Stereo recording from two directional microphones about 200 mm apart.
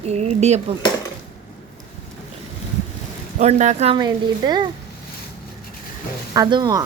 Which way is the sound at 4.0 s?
20° right (ahead or behind).